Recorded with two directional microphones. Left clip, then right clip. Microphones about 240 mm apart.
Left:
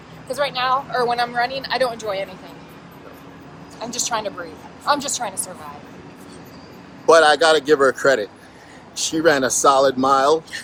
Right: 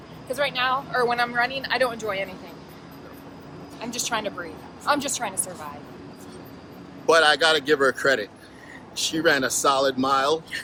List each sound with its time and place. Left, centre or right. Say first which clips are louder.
0.3 s speech: left 3 dB; centre
3.8 s speech: left 4 dB; centre
7.0 s speech: left 5 dB; centre